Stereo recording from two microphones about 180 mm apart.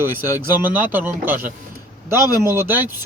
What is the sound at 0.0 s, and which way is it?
Speech, 10° right (ahead or behind).